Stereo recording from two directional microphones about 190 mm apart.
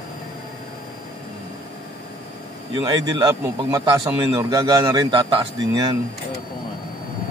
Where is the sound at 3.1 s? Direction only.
20° right (ahead or behind).